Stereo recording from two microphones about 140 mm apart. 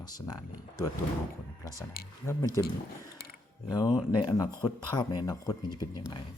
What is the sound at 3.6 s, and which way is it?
Speech, 25° left (ahead or behind).